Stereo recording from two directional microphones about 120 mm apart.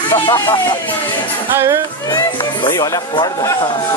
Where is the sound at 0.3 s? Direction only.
40° left (ahead or behind).